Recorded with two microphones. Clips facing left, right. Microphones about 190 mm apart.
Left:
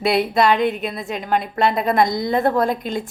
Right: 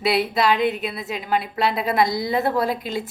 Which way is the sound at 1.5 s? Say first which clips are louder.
Left 3 dB; 50° left (ahead or behind).